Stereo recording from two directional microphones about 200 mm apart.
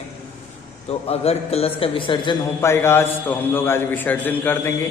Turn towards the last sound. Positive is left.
turn(degrees=10)  # may be behind; listen again after turning